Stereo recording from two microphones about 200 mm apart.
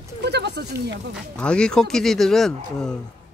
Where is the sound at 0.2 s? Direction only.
55° right (ahead or behind).